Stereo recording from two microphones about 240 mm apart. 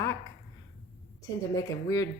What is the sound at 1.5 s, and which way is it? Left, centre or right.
Speech, centre.